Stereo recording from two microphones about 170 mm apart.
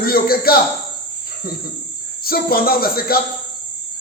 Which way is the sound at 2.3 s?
60° left (ahead or behind).